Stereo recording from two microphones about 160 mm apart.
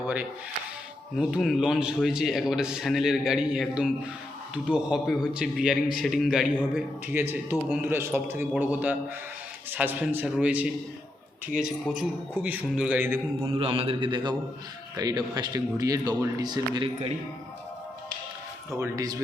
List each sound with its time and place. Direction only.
1.1 s a man's voice: 5° right (ahead or behind)
13.6 s a man's voice: 35° right (ahead or behind)
18.7 s speech: 20° right (ahead or behind)